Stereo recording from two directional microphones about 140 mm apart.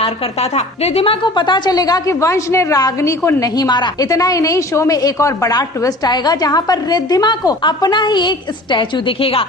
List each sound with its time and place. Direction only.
0.0 s a woman's voice: 50° left (ahead or behind)